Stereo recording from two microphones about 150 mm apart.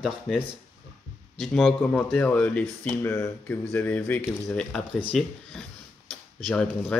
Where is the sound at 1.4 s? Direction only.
5° left (ahead or behind).